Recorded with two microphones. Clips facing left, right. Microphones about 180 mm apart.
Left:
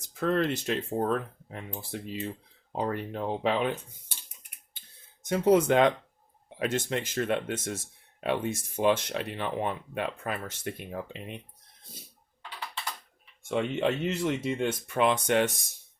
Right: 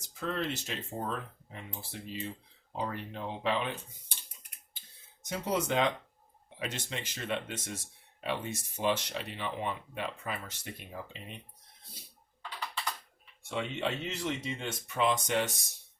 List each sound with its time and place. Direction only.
0.1 s speech: 60° left (ahead or behind)
5.3 s speech: 55° left (ahead or behind)
13.5 s speech: 55° left (ahead or behind)